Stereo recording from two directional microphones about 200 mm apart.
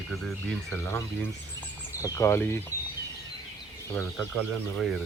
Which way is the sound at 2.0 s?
15° left (ahead or behind).